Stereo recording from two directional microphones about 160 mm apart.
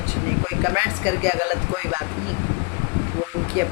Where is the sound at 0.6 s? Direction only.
15° right (ahead or behind).